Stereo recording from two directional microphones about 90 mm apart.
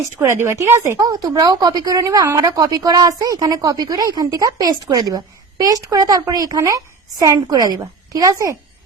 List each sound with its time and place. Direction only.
0.2 s speech: 30° right (ahead or behind)